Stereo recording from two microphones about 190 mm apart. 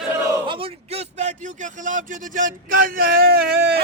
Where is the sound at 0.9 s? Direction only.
35° right (ahead or behind).